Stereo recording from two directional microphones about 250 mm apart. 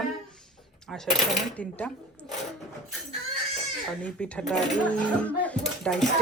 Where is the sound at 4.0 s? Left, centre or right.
Centre.